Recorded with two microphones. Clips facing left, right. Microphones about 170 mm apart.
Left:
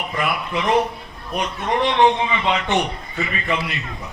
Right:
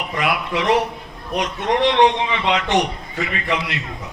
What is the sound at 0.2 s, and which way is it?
A man's voice, 85° right.